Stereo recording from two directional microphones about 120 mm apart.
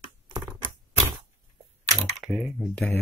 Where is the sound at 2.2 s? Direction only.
Centre (ahead or behind).